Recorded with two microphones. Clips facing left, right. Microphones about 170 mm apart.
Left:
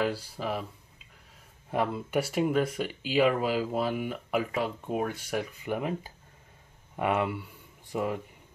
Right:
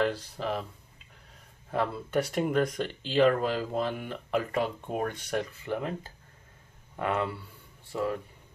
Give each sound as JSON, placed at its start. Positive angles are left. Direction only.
{"t": 0.0, "sound": "speech", "side_deg": 10}